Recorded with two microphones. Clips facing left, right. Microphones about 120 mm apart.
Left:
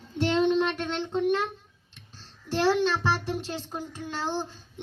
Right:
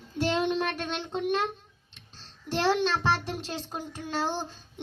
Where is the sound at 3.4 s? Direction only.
15° right (ahead or behind).